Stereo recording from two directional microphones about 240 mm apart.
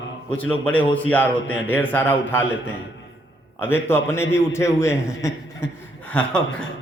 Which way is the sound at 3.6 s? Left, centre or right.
Centre.